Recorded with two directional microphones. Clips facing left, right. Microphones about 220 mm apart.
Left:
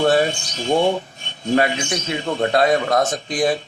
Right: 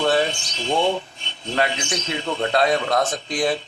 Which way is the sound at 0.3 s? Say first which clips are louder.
Left 4 dB; 45° left (ahead or behind).